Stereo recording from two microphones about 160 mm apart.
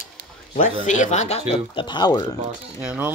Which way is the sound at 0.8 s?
50° left (ahead or behind).